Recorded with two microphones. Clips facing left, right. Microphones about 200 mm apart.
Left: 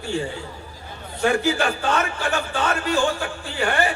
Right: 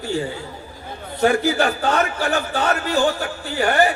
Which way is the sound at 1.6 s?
35° right (ahead or behind).